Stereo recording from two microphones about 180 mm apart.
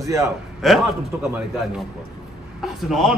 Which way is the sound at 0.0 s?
15° right (ahead or behind).